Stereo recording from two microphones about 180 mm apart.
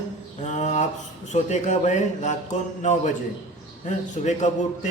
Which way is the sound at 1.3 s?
40° left (ahead or behind).